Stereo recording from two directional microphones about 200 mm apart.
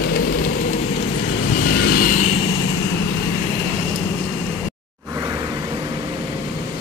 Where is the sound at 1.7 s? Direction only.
50° left (ahead or behind).